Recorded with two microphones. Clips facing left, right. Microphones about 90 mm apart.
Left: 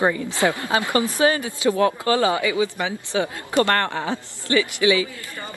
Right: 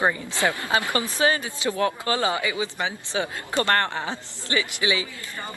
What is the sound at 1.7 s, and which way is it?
Speech, 35° left (ahead or behind).